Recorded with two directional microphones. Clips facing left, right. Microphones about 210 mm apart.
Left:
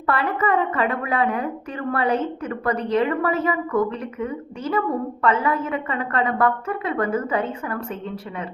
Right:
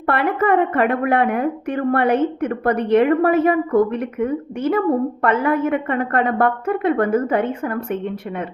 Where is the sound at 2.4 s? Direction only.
60° right (ahead or behind).